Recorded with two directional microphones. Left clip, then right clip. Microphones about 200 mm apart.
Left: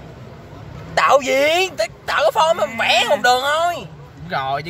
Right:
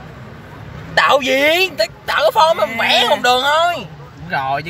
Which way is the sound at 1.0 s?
10° left (ahead or behind).